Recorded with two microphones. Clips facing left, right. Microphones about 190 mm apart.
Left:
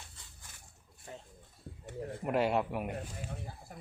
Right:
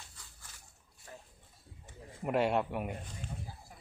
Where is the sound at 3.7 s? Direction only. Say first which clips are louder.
Left 7 dB; 60° left (ahead or behind).